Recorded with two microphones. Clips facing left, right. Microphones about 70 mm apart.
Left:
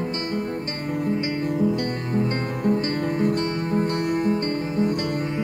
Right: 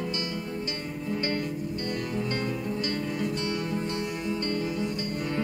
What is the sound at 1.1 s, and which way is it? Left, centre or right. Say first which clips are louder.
Music: left 1 dB; centre.